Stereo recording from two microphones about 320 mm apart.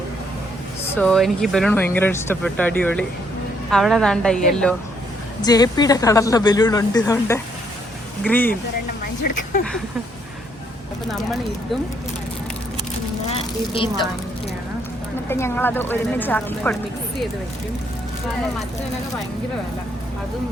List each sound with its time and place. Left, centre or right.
0.9 s speech: centre
5.4 s speech: centre
13.3 s a woman's voice: centre
15.3 s speech: centre